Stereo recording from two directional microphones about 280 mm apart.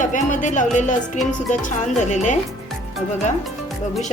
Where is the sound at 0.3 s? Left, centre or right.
Left.